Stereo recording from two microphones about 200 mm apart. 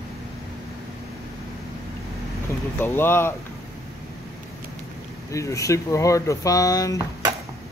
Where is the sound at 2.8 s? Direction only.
10° left (ahead or behind).